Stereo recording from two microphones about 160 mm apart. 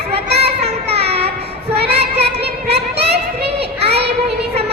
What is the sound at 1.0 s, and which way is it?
Child singing, 40° right (ahead or behind).